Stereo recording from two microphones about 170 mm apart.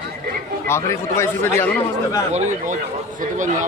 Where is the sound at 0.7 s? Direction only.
15° left (ahead or behind).